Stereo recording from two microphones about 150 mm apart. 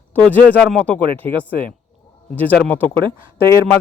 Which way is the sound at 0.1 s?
10° left (ahead or behind).